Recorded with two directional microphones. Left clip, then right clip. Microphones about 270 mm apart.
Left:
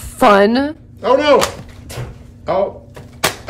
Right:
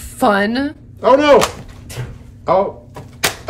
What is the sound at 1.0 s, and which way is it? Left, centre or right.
Speech, centre.